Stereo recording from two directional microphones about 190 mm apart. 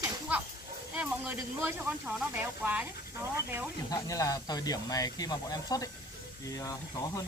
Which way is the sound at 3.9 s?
20° left (ahead or behind).